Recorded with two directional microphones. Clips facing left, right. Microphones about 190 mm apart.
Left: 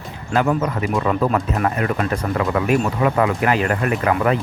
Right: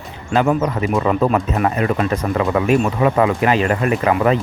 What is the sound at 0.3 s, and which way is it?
Speech, 25° right (ahead or behind).